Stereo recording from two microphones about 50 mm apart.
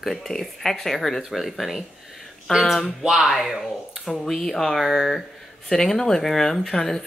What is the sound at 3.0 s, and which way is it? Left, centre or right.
Speech, centre.